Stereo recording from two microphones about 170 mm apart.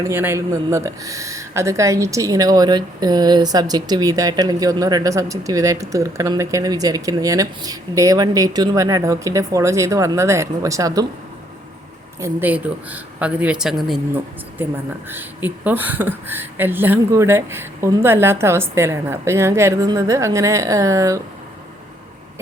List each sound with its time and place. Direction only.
0.0 s speech: 15° right (ahead or behind)
12.2 s speech: 10° right (ahead or behind)
15.1 s speech: 10° right (ahead or behind)